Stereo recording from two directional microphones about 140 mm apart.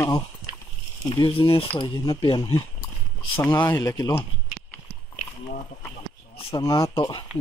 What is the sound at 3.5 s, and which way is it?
Speech, 30° left (ahead or behind).